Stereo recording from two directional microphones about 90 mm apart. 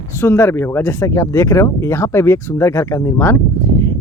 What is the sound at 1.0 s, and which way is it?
Speech, 35° left (ahead or behind).